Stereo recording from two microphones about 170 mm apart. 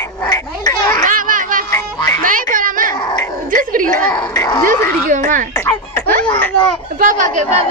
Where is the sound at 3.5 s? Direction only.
55° right (ahead or behind).